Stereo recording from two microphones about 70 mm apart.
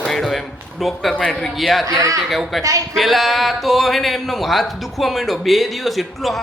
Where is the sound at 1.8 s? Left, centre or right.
Right.